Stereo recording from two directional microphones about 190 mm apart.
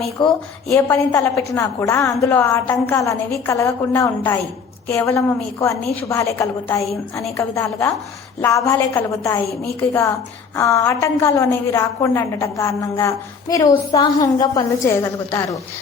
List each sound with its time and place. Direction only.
0.2 s a woman's voice: 25° left (ahead or behind)